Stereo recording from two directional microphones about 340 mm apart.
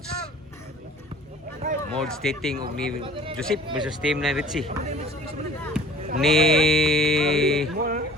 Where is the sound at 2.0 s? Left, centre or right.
Centre.